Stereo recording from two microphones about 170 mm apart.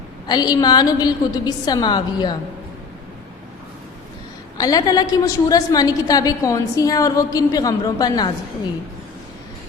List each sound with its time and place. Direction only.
0.3 s a woman's voice: 25° left (ahead or behind)
4.5 s a woman's voice: 20° left (ahead or behind)